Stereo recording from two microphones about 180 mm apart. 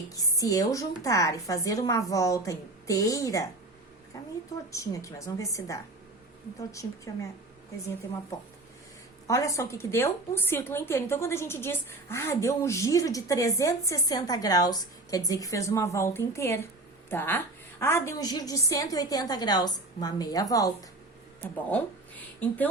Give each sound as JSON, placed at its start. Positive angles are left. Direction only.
{"t": 0.1, "sound": "a woman's voice", "side_deg": 20}
{"t": 4.7, "sound": "a woman's voice", "side_deg": 15}
{"t": 9.2, "sound": "a woman's voice", "side_deg": 15}